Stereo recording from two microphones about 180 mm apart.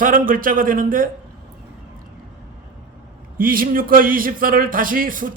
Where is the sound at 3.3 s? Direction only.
50° right (ahead or behind).